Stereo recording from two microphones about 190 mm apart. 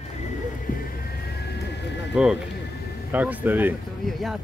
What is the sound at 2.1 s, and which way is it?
Speech, 5° right (ahead or behind).